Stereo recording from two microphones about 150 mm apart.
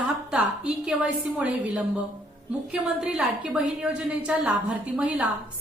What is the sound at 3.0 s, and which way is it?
A woman's voice, 5° right (ahead or behind).